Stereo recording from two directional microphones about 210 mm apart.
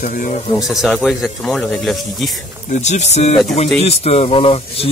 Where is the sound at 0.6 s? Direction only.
Centre (ahead or behind).